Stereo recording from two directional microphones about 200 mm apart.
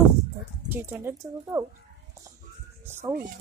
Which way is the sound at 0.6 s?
10° right (ahead or behind).